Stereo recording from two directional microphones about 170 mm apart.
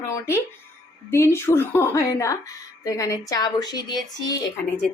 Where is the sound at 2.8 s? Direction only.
20° left (ahead or behind).